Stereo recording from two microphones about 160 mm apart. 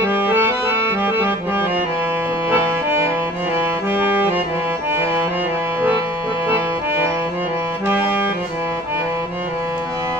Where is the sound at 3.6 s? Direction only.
10° right (ahead or behind).